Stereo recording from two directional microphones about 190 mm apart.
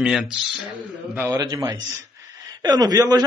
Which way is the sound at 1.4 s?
20° right (ahead or behind).